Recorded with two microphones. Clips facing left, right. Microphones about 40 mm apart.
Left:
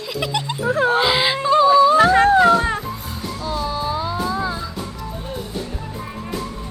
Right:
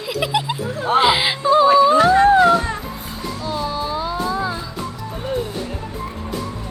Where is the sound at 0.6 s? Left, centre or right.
Left.